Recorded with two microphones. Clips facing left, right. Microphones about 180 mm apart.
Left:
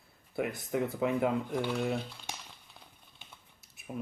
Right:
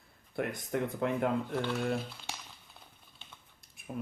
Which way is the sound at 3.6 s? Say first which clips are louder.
Even; 5° left (ahead or behind).